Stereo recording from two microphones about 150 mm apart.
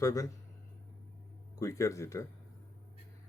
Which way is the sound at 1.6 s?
20° left (ahead or behind).